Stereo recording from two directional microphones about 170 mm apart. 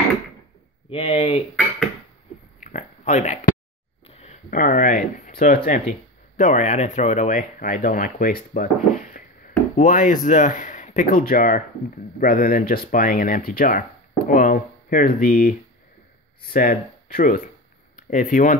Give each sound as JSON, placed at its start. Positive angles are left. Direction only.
{"t": 0.8, "sound": "speech", "side_deg": 35}
{"t": 2.6, "sound": "a sound", "side_deg": 45}
{"t": 4.5, "sound": "speech", "side_deg": 55}